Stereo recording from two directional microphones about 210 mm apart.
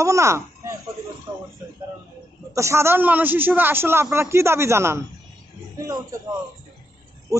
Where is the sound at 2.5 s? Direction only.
15° right (ahead or behind).